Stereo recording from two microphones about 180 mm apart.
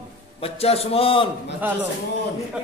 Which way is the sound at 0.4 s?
35° left (ahead or behind).